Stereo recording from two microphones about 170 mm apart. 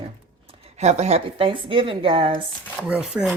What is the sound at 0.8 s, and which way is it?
A woman's voice, 40° right (ahead or behind).